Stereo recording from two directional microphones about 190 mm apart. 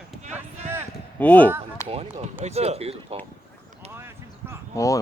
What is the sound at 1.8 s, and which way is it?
Speech, 30° right (ahead or behind).